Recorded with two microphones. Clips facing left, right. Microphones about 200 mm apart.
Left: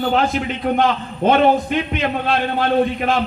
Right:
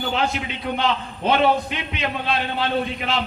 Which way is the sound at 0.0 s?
50° left (ahead or behind).